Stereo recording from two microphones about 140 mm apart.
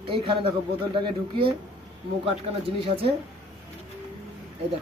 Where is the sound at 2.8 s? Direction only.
45° right (ahead or behind).